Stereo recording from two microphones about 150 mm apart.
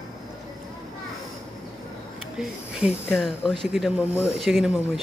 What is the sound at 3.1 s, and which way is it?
Speech, 5° right (ahead or behind).